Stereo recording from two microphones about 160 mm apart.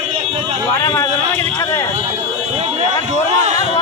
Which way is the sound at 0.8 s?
15° left (ahead or behind).